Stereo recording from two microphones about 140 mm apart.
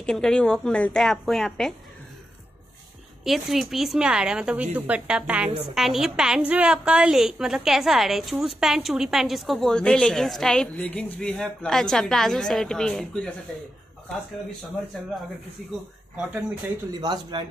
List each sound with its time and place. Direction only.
0.0 s a woman's voice: 5° left (ahead or behind)
3.3 s a woman's voice: centre (ahead or behind)
17.0 s speech: 30° right (ahead or behind)